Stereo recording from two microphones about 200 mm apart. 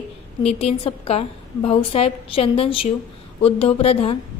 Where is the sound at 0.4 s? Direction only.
30° left (ahead or behind).